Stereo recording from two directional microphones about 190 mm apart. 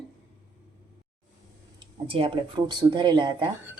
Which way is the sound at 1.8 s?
25° right (ahead or behind).